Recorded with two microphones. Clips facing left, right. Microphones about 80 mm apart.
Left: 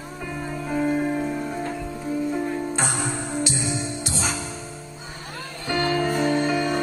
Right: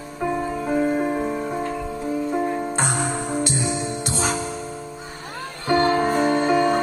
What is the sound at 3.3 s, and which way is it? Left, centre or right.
Music, right.